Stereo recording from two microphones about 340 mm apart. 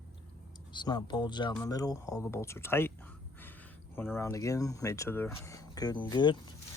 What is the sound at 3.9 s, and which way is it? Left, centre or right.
Speech, centre.